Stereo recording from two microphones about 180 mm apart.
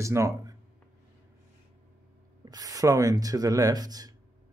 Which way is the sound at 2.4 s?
20° right (ahead or behind).